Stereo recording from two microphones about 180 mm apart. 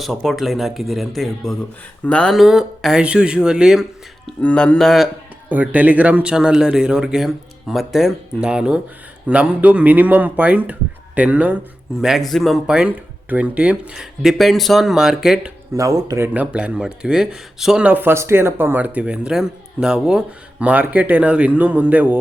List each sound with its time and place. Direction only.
0.0 s speech: centre (ahead or behind)
5.5 s speech: 10° right (ahead or behind)
15.7 s speech: 20° right (ahead or behind)